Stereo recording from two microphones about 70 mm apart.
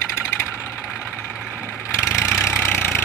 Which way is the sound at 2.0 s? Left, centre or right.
Left.